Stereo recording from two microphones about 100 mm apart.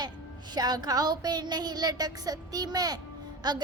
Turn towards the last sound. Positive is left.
turn(degrees=-40)  # may be behind; listen again after turning